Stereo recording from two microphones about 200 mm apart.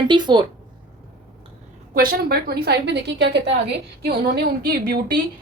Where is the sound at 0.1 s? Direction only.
25° right (ahead or behind).